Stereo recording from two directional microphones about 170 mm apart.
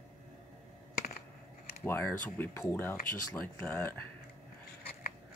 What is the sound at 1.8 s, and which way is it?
Speech, 10° left (ahead or behind).